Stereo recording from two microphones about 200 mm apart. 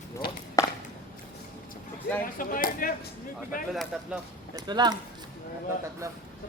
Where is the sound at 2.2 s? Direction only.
45° left (ahead or behind).